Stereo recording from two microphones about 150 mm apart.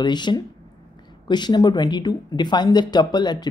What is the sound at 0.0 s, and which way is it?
Speech, 30° left (ahead or behind).